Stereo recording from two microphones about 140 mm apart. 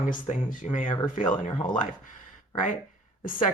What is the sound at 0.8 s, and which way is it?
Speech, 35° left (ahead or behind).